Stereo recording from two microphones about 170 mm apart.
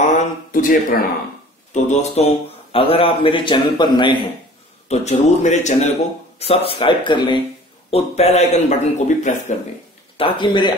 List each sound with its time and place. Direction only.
0.0 s a sound: 55° left (ahead or behind)
1.7 s a man's voice: 40° left (ahead or behind); by 4.2 s 25° left (ahead or behind)
4.8 s a man's voice: 40° left (ahead or behind)
7.9 s a man's voice: 40° left (ahead or behind)
10.1 s speech: 30° left (ahead or behind)